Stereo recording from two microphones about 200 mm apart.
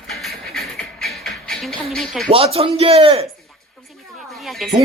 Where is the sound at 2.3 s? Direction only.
30° right (ahead or behind).